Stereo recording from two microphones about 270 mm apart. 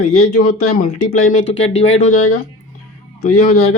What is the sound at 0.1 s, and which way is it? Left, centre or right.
Speech, left.